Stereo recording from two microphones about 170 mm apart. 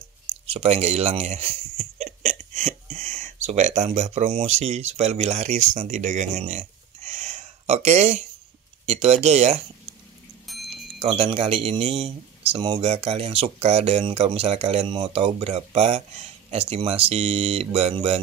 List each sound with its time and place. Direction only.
0.5 s speech: 35° right (ahead or behind)
10.4 s wind chime: centre (ahead or behind)
11.0 s speech: 35° right (ahead or behind)